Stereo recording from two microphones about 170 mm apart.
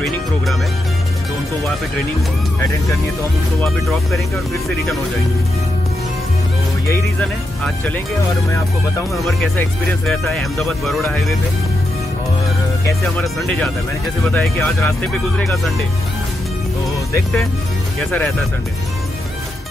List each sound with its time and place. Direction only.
6.9 s speech: 10° left (ahead or behind)
9.1 s speech: centre (ahead or behind)
13.2 s speech: 10° left (ahead or behind)